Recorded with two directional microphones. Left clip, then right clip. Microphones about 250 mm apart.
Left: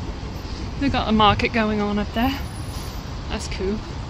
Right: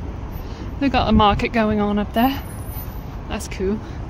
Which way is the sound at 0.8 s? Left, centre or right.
Centre.